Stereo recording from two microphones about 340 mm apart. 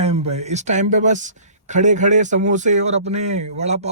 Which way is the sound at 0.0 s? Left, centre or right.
Centre.